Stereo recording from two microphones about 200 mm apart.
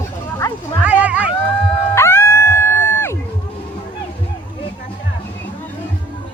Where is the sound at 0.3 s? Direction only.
15° left (ahead or behind).